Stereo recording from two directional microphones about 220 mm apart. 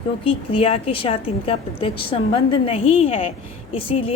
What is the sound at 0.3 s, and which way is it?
A woman's voice, 25° left (ahead or behind).